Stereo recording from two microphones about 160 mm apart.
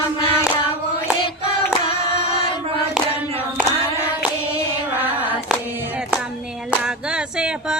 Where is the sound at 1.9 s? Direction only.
40° left (ahead or behind).